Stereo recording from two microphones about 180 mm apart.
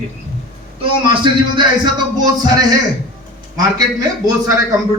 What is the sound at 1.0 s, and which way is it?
Speech, 25° right (ahead or behind).